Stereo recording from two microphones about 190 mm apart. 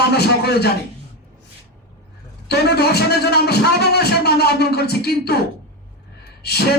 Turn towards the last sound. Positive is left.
turn(degrees=55)  # may be behind; listen again after turning